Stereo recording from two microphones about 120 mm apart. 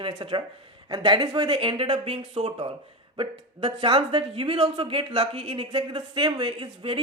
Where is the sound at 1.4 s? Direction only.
50° right (ahead or behind).